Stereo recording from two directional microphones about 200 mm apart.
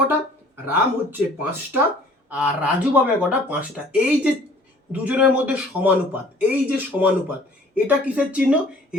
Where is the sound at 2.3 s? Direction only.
5° right (ahead or behind).